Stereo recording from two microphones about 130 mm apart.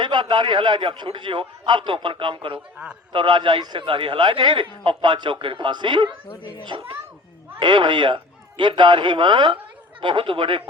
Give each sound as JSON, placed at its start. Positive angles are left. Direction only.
{"t": 0.0, "sound": "a child's voice", "side_deg": -35}